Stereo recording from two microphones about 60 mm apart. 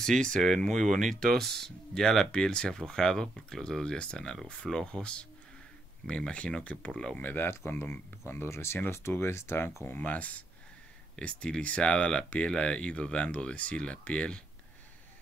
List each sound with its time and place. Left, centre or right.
0.0 s speech: centre
7.2 s speech: left
10.0 s speech: left